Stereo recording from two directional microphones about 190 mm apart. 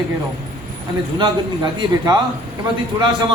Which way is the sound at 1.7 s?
20° right (ahead or behind).